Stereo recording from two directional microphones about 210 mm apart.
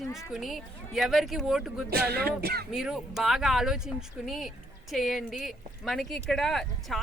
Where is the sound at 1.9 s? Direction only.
50° right (ahead or behind).